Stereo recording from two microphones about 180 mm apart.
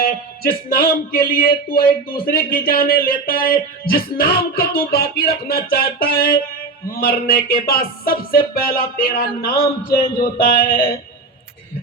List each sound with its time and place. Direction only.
0.0 s speech: 55° left (ahead or behind)